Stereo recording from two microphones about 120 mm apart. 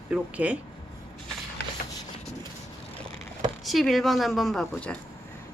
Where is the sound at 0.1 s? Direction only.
10° right (ahead or behind).